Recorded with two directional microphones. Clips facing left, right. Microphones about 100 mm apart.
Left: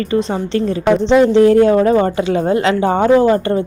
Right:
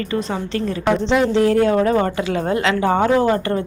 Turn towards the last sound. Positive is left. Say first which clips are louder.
# left 5 dB
turn(degrees=25)  # may be behind; listen again after turning